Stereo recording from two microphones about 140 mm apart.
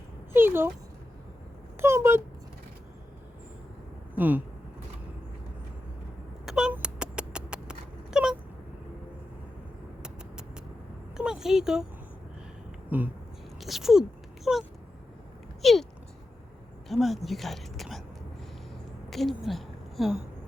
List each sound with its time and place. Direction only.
0.3 s speech: 15° right (ahead or behind)
1.8 s speech: 20° right (ahead or behind)
4.1 s speech: 10° right (ahead or behind)
6.4 s dog: 5° right (ahead or behind)
11.2 s a sound: 5° right (ahead or behind)
12.9 s speech: 15° right (ahead or behind)
13.6 s speech: centre (ahead or behind)
15.6 s a sound: centre (ahead or behind)
16.9 s speech: centre (ahead or behind)
19.1 s a woman's voice: centre (ahead or behind)